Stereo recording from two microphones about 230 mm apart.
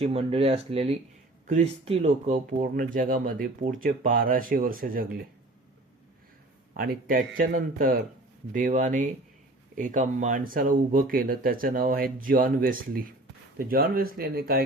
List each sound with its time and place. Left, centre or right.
0.0 s speech: right
6.7 s speech: right